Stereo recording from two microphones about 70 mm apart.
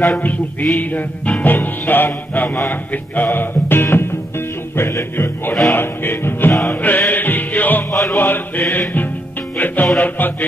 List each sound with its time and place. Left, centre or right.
0.2 s music: left
7.9 s music: left
8.2 s music: left